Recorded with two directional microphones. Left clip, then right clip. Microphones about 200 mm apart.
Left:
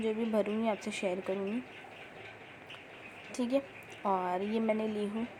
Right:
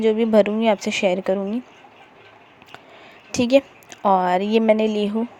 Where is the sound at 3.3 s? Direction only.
45° right (ahead or behind).